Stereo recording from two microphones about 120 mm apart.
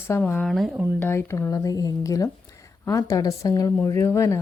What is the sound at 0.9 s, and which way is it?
Speech, 20° left (ahead or behind).